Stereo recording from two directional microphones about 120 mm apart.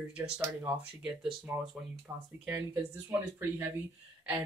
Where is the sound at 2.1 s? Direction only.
20° right (ahead or behind).